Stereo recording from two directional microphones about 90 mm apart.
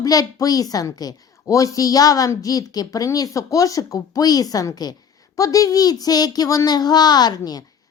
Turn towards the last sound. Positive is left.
turn(degrees=45)  # may be behind; listen again after turning